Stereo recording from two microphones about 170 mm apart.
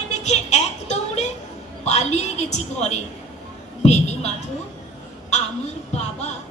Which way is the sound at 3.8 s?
40° left (ahead or behind).